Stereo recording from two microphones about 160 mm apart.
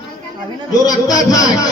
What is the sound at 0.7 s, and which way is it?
Speech, 25° left (ahead or behind).